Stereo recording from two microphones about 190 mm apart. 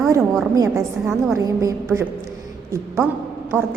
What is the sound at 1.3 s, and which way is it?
Speech, 15° right (ahead or behind).